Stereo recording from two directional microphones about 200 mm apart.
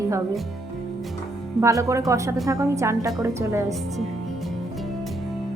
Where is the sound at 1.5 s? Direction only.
15° right (ahead or behind).